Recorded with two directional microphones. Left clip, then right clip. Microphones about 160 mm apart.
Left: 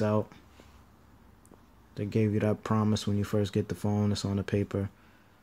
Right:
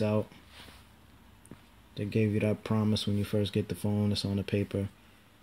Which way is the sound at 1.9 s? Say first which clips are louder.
Left 1 dB; 10° left (ahead or behind).